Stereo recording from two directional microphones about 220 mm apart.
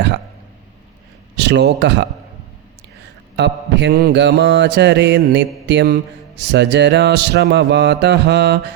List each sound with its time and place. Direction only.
1.4 s speech: 50° right (ahead or behind)
3.3 s mantra: 50° right (ahead or behind)